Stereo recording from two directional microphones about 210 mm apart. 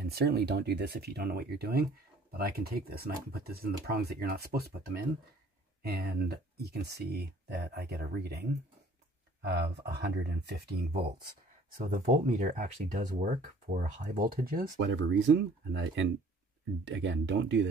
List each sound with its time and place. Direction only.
0.0 s speech: 50° right (ahead or behind)
11.7 s speech: 40° right (ahead or behind)
14.9 s speech: 60° right (ahead or behind)